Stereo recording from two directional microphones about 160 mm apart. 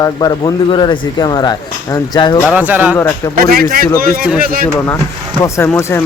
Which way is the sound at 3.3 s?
65° right (ahead or behind).